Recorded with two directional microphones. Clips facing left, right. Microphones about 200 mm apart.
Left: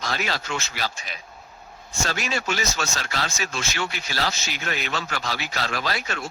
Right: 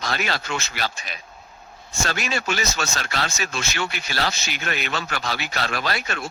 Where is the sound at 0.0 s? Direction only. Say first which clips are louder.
Right 1 dB; 65° right (ahead or behind).